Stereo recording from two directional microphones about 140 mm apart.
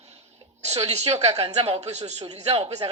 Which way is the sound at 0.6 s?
45° right (ahead or behind).